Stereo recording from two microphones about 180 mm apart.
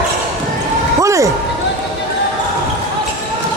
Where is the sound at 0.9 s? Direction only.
15° right (ahead or behind).